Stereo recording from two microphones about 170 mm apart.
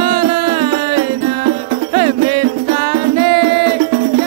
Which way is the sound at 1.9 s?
30° right (ahead or behind).